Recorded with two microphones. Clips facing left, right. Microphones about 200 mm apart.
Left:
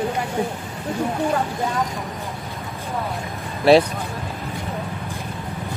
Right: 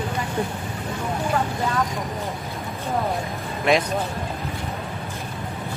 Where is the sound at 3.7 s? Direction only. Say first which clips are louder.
Left 7 dB; 35° left (ahead or behind).